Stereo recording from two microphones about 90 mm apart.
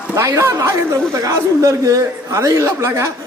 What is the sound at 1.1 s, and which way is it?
A man's voice, 40° right (ahead or behind).